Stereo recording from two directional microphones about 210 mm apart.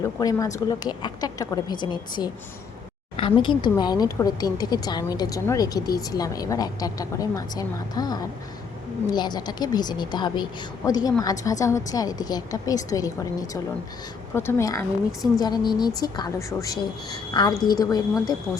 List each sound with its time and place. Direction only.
0.2 s a woman's voice: 15° left (ahead or behind)